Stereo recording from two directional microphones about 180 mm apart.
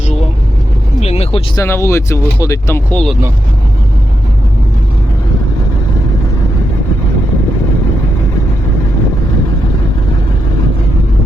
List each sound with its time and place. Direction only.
1.0 s vehicle: 35° left (ahead or behind)
1.5 s speech: 15° left (ahead or behind)